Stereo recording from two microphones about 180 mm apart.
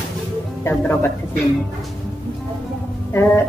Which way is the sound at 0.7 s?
15° left (ahead or behind).